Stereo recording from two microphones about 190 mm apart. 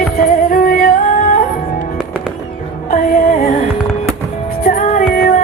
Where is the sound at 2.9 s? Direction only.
45° left (ahead or behind).